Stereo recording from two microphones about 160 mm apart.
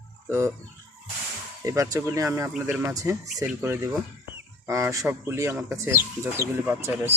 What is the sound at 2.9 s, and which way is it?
Speech, 20° right (ahead or behind).